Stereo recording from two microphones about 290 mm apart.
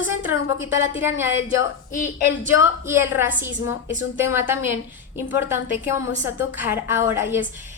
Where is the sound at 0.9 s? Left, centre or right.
Centre.